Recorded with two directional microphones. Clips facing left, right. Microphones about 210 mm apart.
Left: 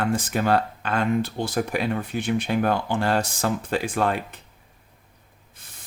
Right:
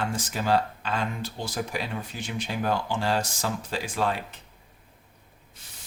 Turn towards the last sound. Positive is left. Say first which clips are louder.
# left 5 dB
turn(degrees=55)  # may be behind; listen again after turning